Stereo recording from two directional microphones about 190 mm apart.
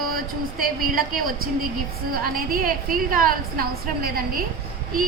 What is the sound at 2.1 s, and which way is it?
A woman's voice, 50° right (ahead or behind).